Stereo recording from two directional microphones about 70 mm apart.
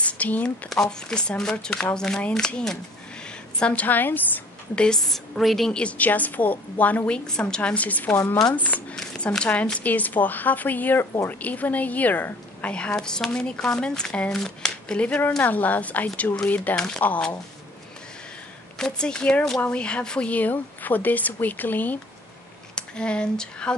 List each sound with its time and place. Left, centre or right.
0.0 s a sound: left
0.7 s a woman's voice: centre; by 4.2 s left
4.7 s a woman's voice: centre
5.7 s a woman's voice: centre
7.2 s a woman's voice: centre
8.9 s a sound: centre
9.4 s a woman's voice: centre
12.7 s a woman's voice: centre
16.7 s speech: centre
17.0 s a woman's voice: left
18.8 s a woman's voice: centre
22.8 s speech: centre